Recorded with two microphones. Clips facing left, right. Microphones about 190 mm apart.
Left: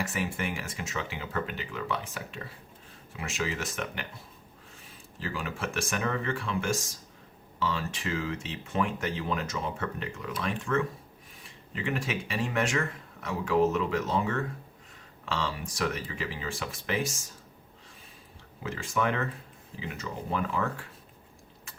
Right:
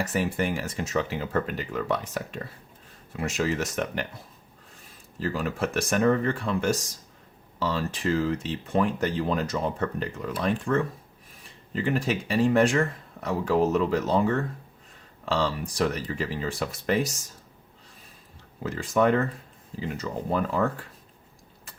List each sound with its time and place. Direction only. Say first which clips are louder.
0.1 s speech: right 6 dB; 40° right (ahead or behind)
5.2 s speech: right 7 dB; 40° right (ahead or behind)
18.6 s speech: right 7 dB; 40° right (ahead or behind)